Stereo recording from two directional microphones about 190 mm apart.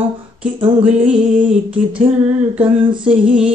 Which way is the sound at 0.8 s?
5° right (ahead or behind).